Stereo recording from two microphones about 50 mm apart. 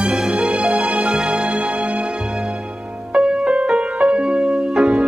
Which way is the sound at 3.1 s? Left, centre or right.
Centre.